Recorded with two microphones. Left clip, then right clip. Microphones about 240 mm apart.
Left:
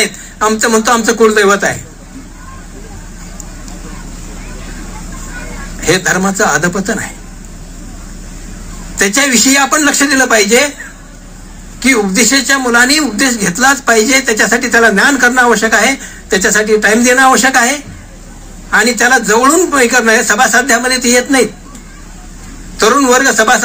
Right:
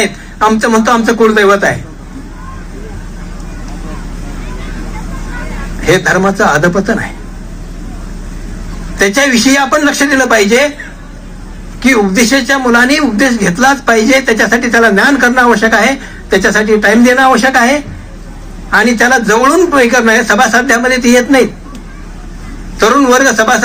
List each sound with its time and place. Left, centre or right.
0.0 s a man's voice: left
5.8 s a man's voice: left
8.9 s a man's voice: left
11.8 s a man's voice: left
22.8 s a man's voice: left